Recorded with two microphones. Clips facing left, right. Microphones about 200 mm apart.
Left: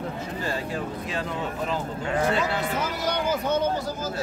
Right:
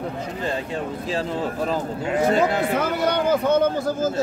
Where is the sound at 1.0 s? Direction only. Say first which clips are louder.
Right 5 dB; 30° right (ahead or behind).